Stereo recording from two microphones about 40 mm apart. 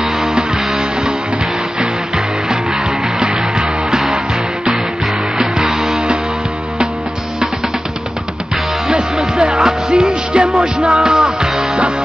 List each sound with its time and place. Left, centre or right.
0.0 s music: centre
5.7 s music: centre
9.4 s music: centre